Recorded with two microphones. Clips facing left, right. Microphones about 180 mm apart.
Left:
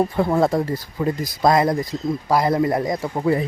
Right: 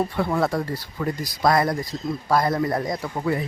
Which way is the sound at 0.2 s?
25° left (ahead or behind).